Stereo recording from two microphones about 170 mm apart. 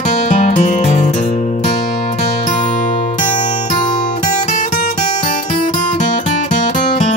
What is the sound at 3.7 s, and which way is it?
Music, 45° left (ahead or behind).